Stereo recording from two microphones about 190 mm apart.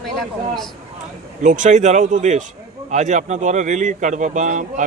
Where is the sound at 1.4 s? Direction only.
40° right (ahead or behind).